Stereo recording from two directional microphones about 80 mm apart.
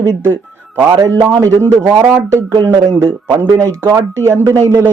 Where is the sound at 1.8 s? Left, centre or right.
Right.